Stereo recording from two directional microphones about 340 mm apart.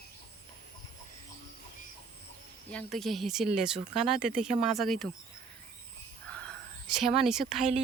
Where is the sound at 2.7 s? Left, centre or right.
Centre.